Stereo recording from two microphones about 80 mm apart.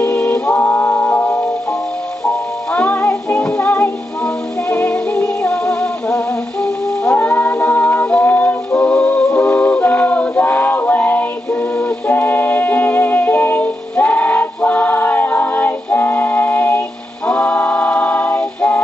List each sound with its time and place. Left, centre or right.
0.0 s music: centre
0.6 s music: left
2.7 s music: centre
17.3 s a capella: centre